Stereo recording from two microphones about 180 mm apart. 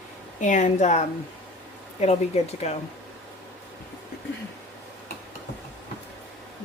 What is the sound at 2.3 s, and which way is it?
Speech, 35° left (ahead or behind).